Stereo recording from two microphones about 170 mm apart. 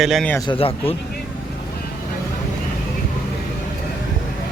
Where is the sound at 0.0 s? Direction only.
Centre (ahead or behind).